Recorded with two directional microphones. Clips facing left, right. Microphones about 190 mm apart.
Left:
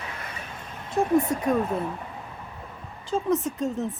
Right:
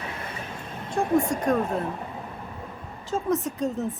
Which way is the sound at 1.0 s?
20° left (ahead or behind).